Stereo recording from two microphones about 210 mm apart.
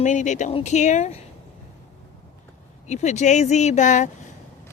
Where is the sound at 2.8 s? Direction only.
35° left (ahead or behind).